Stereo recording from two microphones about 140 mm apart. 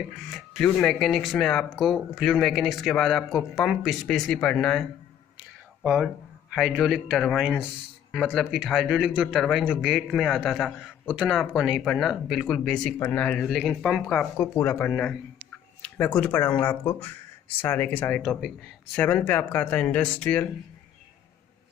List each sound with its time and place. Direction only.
0.1 s speech: 5° left (ahead or behind)
6.5 s speech: centre (ahead or behind)